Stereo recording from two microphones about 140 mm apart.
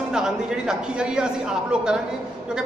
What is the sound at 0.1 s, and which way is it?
A woman's voice, 5° right (ahead or behind).